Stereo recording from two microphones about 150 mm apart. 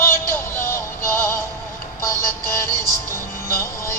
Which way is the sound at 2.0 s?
20° left (ahead or behind).